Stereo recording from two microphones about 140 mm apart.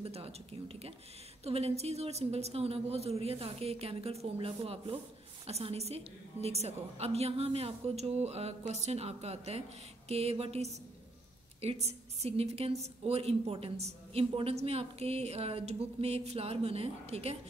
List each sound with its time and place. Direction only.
0.0 s a woman's voice: 45° right (ahead or behind)